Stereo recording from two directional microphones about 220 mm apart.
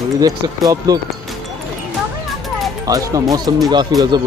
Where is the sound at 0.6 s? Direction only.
15° right (ahead or behind).